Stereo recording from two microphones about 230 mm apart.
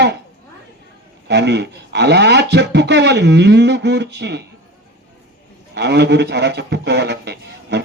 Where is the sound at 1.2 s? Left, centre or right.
Right.